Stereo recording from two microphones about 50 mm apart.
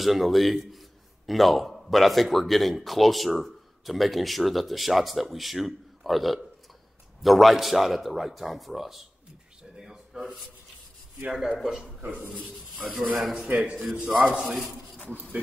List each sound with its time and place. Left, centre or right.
0.0 s a man's voice: centre
9.6 s a sound: centre
11.4 s a man's voice: centre
12.0 s speech: right
13.2 s speech: centre
13.5 s speech: right
13.7 s a man's voice: centre